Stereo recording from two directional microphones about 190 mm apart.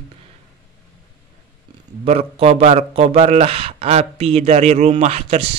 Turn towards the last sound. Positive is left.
turn(degrees=-35)  # may be behind; listen again after turning